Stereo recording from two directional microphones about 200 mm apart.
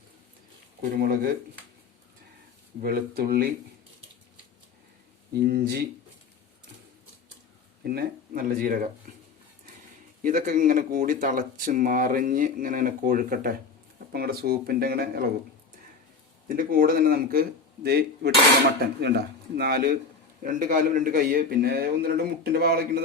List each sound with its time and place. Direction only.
0.8 s a man's voice: 45° right (ahead or behind)
2.8 s a man's voice: 50° right (ahead or behind)
5.3 s a man's voice: 50° right (ahead or behind)
7.9 s a man's voice: 45° right (ahead or behind)
10.2 s a man's voice: 40° right (ahead or behind)
16.6 s a man's voice: 45° right (ahead or behind)